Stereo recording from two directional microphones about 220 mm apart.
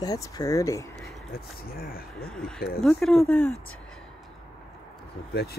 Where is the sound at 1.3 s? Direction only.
40° left (ahead or behind).